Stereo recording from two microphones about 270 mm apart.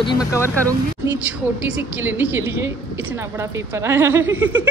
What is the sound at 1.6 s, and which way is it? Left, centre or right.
A woman's voice, centre.